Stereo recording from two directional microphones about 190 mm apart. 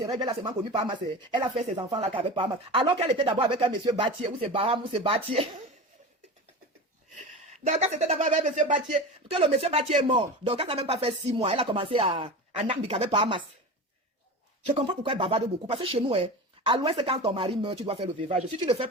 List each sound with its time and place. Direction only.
0.0 s speech: 20° right (ahead or behind)
7.6 s speech: 35° right (ahead or behind)
14.8 s speech: 25° right (ahead or behind)